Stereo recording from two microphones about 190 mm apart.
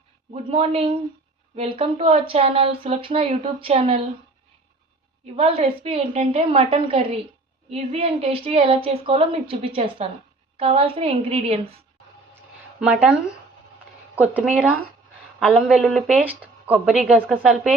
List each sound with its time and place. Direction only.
0.5 s speech: 30° right (ahead or behind)
5.2 s speech: 30° right (ahead or behind)
12.8 s a woman's voice: 5° right (ahead or behind)
14.2 s a woman's voice: 5° right (ahead or behind)